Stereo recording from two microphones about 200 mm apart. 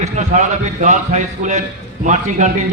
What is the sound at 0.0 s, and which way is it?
A man's voice, 35° right (ahead or behind).